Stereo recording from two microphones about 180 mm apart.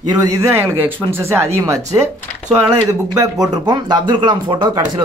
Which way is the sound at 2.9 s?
20° right (ahead or behind).